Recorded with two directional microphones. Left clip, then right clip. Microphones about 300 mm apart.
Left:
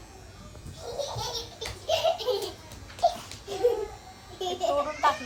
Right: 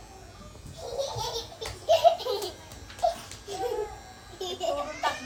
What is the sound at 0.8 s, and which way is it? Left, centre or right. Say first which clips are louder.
Laughter: right 1 dB; centre.